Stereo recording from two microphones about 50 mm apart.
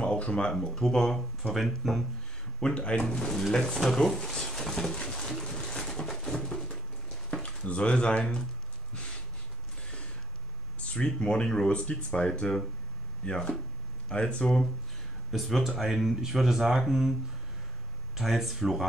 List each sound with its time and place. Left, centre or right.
0.0 s speech: left; by 2.0 s centre
2.6 s speech: left
3.2 s speech: centre
3.8 s speech: centre
5.0 s a sound: centre
7.4 s speech: left
10.8 s speech: left
15.3 s speech: centre
18.1 s speech: centre